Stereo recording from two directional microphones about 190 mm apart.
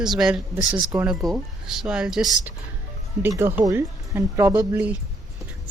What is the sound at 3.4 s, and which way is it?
Speech, 10° right (ahead or behind).